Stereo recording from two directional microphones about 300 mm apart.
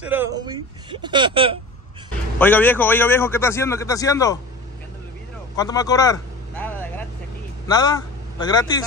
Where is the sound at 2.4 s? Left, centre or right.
Centre.